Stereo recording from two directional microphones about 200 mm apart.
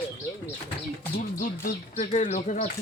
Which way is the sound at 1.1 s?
45° left (ahead or behind).